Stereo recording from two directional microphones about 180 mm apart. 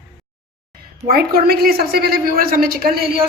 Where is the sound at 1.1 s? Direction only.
55° right (ahead or behind).